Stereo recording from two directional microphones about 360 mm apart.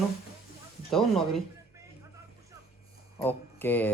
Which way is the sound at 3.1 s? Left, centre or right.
Centre.